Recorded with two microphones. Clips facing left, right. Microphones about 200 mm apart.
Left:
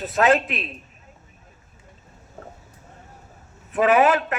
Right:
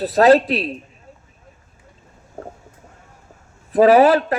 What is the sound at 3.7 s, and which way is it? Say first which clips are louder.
Speech: right 6 dB; 35° right (ahead or behind).